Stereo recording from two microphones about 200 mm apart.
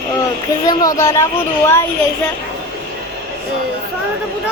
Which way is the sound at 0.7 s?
20° left (ahead or behind).